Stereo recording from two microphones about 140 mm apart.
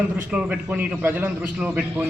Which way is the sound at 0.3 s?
5° right (ahead or behind).